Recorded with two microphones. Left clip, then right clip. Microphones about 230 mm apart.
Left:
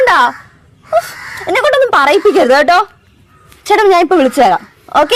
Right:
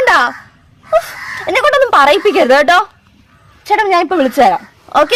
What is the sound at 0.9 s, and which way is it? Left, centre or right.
Speech, centre.